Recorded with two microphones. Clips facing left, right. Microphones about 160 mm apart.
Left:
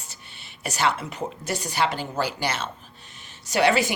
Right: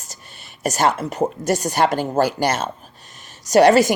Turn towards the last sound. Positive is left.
turn(degrees=-40)  # may be behind; listen again after turning